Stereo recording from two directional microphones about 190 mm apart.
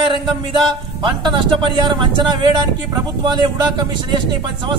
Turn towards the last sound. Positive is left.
turn(degrees=-25)  # may be behind; listen again after turning